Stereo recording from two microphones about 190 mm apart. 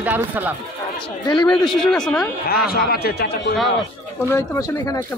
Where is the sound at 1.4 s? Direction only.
5° left (ahead or behind).